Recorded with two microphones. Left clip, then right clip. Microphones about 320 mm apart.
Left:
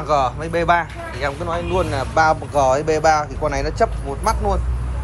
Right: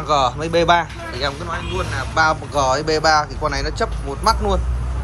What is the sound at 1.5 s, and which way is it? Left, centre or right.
Speech, centre.